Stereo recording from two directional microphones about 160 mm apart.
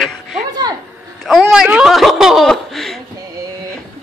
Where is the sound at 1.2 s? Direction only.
Centre (ahead or behind).